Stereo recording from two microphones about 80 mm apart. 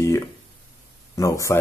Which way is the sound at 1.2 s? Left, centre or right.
Left.